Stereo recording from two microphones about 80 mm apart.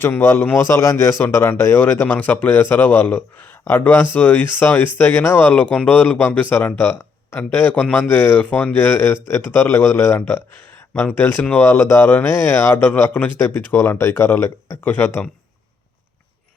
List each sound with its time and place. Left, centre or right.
0.0 s speech: left